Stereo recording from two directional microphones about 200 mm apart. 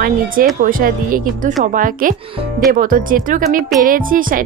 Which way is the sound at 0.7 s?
45° right (ahead or behind).